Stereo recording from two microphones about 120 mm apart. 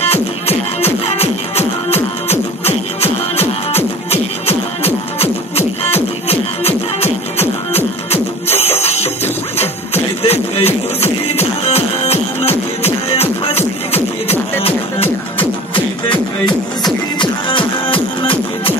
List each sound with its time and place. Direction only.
0.0 s music: 60° left (ahead or behind)
16.4 s music: 40° left (ahead or behind)